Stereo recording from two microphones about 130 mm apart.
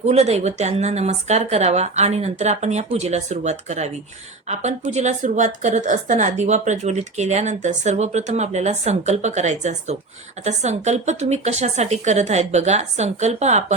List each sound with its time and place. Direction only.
0.0 s a woman's voice: 55° right (ahead or behind)